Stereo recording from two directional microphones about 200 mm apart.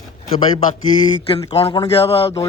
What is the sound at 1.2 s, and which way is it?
Speech, 30° left (ahead or behind).